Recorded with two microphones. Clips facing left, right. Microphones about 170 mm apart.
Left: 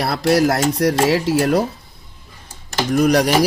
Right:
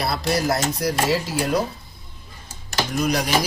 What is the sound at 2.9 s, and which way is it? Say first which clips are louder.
Speech: left 8 dB; 70° left (ahead or behind).